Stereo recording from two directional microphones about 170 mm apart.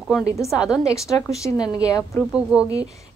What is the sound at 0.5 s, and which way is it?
Speech, 5° right (ahead or behind).